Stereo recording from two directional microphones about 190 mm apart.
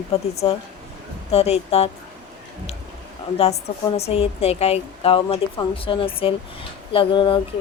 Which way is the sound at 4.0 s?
30° left (ahead or behind).